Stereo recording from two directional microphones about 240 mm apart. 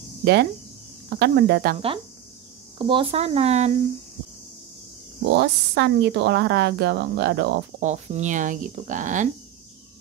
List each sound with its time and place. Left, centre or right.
0.2 s speech: right
2.8 s speech: right
5.3 s speech: right
7.8 s speech: right